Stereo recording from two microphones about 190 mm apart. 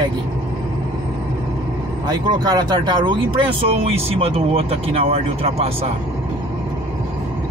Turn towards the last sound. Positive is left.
turn(degrees=-30)  # may be behind; listen again after turning